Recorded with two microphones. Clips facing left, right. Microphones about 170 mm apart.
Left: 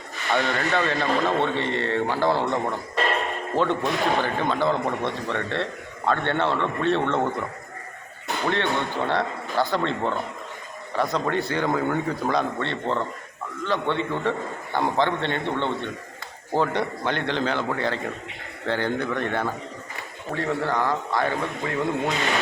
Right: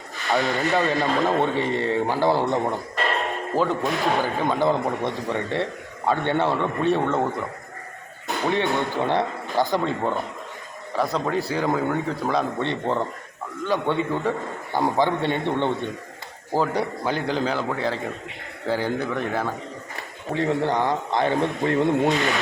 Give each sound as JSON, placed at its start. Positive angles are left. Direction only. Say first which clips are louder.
{"t": 0.3, "sound": "a man's voice", "louder": "right 2 dB", "side_deg": 0}
{"t": 0.7, "sound": "a man's voice", "louder": "right 3 dB", "side_deg": -20}
{"t": 0.9, "sound": "a man's voice", "louder": "right 1 dB", "side_deg": 0}
{"t": 3.0, "sound": "a man's voice", "louder": "left 1 dB", "side_deg": 0}
{"t": 9.0, "sound": "a man's voice", "louder": "right 2 dB", "side_deg": -15}
{"t": 12.5, "sound": "a man's voice", "louder": "right 2 dB", "side_deg": -15}
{"t": 16.5, "sound": "a man's voice", "louder": "right 1 dB", "side_deg": -5}
{"t": 20.3, "sound": "a man's voice", "louder": "right 3 dB", "side_deg": -20}
{"t": 22.1, "sound": "a man's voice", "louder": "right 3 dB", "side_deg": 0}